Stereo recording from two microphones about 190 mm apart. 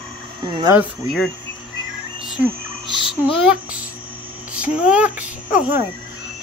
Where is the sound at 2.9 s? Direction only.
25° left (ahead or behind).